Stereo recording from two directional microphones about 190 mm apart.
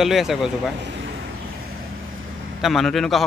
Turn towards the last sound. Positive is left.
turn(degrees=0)  # may be behind; listen again after turning